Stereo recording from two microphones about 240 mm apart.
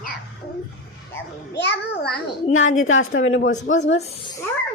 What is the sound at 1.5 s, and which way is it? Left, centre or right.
A child's voice, left.